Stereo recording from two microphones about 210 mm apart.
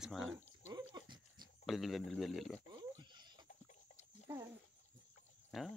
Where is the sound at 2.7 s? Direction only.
20° right (ahead or behind).